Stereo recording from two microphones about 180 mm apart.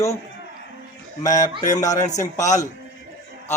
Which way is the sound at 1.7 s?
20° left (ahead or behind).